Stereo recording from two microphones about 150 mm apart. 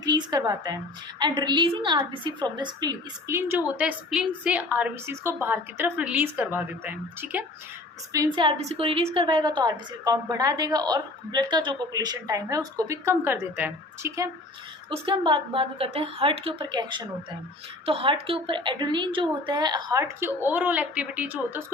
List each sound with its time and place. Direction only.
0.0 s a woman's voice: 25° right (ahead or behind)
3.8 s a woman's voice: 5° right (ahead or behind); by 8.4 s 20° right (ahead or behind)
8.4 s a woman's voice: 35° right (ahead or behind); by 14.3 s 15° right (ahead or behind)
15.0 s a woman's voice: 35° right (ahead or behind); by 21.6 s 10° right (ahead or behind)